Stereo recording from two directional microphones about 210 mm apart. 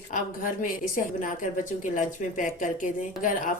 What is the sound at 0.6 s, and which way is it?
Speech, 40° left (ahead or behind).